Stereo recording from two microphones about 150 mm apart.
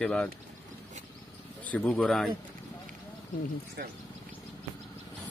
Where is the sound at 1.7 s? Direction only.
10° left (ahead or behind).